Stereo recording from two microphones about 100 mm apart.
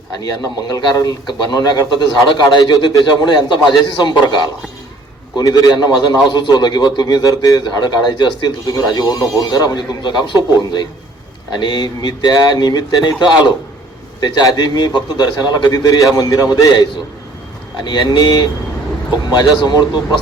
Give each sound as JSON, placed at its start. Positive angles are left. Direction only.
{"t": 0.2, "sound": "a man's voice", "side_deg": 40}
{"t": 5.4, "sound": "a man's voice", "side_deg": 40}